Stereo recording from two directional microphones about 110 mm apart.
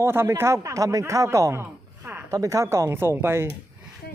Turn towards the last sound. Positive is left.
turn(degrees=-20)  # may be behind; listen again after turning